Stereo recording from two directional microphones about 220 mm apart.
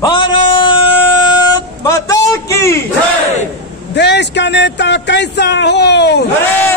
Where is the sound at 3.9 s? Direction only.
50° left (ahead or behind).